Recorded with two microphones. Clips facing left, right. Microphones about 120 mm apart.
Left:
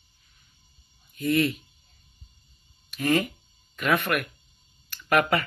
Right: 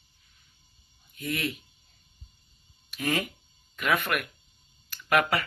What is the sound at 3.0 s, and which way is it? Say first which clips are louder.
Speech: left 5 dB; 10° right (ahead or behind).